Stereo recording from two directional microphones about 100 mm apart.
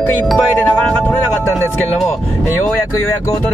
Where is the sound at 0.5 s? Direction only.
15° left (ahead or behind).